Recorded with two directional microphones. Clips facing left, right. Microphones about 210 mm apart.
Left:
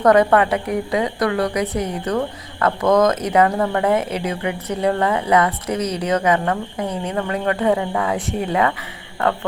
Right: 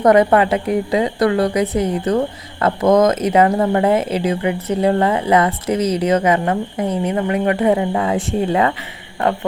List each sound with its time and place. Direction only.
0.0 s a woman's voice: 20° right (ahead or behind)